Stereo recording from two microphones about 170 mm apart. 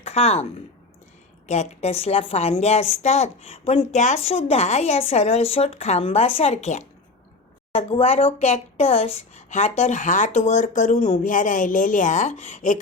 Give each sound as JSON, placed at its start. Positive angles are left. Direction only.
{"t": 0.0, "sound": "speech", "side_deg": 35}
{"t": 1.5, "sound": "a woman's voice", "side_deg": 40}